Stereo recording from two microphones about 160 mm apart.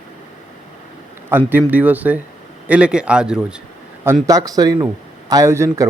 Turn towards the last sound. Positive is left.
turn(degrees=-20)  # may be behind; listen again after turning